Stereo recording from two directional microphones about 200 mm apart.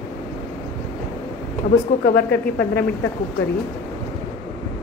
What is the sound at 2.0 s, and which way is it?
Speech, 55° left (ahead or behind).